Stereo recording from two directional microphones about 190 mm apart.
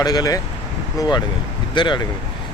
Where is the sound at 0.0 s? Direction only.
20° left (ahead or behind).